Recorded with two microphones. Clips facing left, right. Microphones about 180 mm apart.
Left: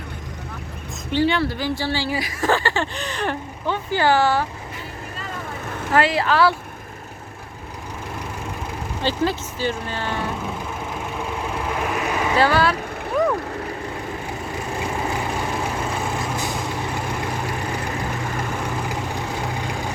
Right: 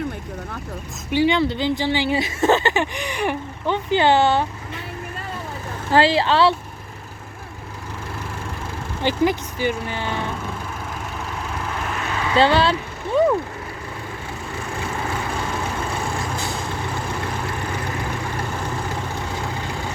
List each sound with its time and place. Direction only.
1.1 s speech: 15° right (ahead or behind)
5.9 s speech: 30° right (ahead or behind)
9.0 s speech: 15° right (ahead or behind)
11.9 s vehicle: 15° left (ahead or behind)
12.4 s speech: 25° right (ahead or behind)